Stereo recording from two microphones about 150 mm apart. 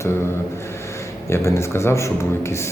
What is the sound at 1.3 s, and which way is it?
Speech, 20° left (ahead or behind).